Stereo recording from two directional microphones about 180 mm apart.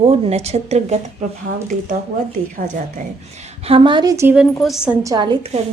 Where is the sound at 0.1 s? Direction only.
35° right (ahead or behind).